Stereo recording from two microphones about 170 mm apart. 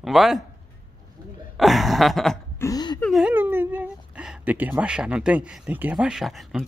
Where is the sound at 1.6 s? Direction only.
Centre (ahead or behind).